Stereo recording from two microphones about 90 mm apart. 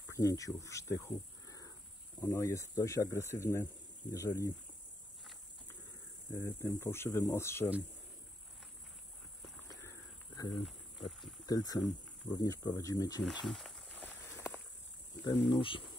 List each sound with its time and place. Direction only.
0.1 s speech: 40° left (ahead or behind)
6.3 s speech: 25° left (ahead or behind)
9.7 s a sound: 40° left (ahead or behind)
10.6 s insect: centre (ahead or behind)
11.4 s speech: 45° left (ahead or behind)
13.5 s snake: centre (ahead or behind)
13.9 s a sound: 20° left (ahead or behind)
15.2 s speech: 70° left (ahead or behind)